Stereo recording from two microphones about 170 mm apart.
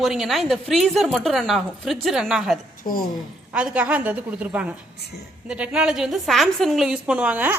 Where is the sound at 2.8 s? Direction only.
55° left (ahead or behind).